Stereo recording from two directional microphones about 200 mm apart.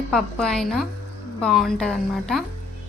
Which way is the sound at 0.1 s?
5° left (ahead or behind).